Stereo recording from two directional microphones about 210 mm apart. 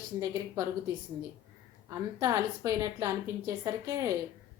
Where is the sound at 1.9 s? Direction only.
15° right (ahead or behind).